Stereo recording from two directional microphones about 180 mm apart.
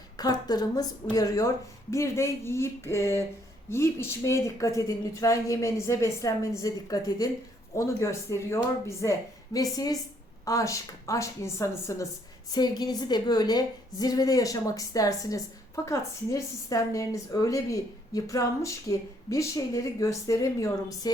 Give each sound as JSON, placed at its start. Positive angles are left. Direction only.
{"t": 0.2, "sound": "a woman's voice", "side_deg": 20}